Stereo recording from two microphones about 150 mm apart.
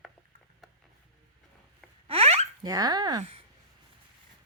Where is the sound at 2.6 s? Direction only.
25° right (ahead or behind).